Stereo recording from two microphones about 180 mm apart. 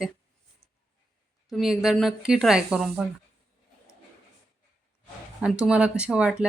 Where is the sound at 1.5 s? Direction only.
Centre (ahead or behind).